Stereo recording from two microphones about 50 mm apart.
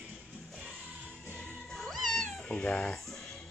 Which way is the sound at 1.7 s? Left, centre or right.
Centre.